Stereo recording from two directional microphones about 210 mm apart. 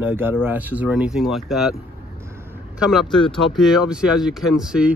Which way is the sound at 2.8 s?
Centre (ahead or behind).